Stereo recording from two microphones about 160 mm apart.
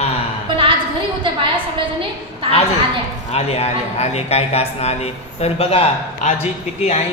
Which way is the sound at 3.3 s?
40° left (ahead or behind).